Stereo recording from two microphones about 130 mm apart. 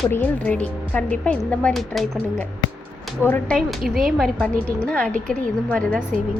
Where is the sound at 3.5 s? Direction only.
Centre (ahead or behind).